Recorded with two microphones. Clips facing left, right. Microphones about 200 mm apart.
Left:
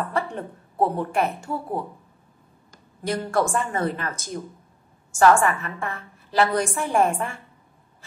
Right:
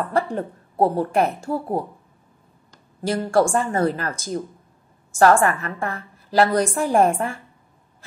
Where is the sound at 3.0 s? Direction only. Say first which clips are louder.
Right 4 dB; 30° right (ahead or behind).